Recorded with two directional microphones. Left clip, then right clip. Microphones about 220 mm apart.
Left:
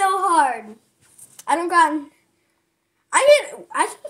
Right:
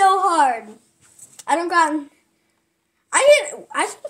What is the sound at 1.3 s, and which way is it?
Speech, 5° right (ahead or behind).